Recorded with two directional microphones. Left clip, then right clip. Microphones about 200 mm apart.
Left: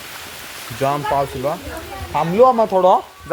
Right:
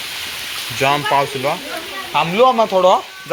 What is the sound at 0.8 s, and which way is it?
Speech, centre (ahead or behind).